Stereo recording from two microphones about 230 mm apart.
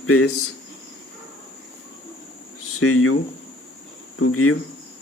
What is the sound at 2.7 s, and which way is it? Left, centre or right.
Speech, left.